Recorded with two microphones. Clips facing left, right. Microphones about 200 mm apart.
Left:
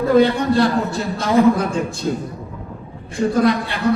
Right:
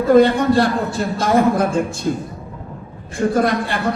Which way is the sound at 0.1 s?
50° right (ahead or behind).